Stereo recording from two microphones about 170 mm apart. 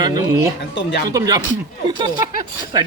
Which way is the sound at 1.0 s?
20° right (ahead or behind).